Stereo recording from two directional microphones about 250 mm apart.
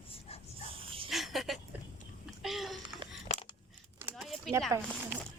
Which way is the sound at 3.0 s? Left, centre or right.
Right.